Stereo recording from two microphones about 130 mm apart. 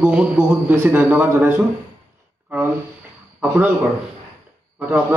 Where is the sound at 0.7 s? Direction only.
20° right (ahead or behind).